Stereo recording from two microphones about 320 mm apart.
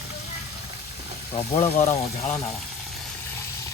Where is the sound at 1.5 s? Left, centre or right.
Centre.